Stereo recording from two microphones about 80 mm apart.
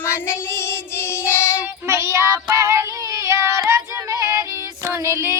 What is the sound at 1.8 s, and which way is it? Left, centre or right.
Child singing, right.